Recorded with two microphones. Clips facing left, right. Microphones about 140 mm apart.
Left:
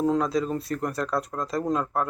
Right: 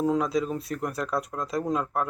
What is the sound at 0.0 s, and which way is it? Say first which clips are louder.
Speech: left 1 dB; 5° right (ahead or behind).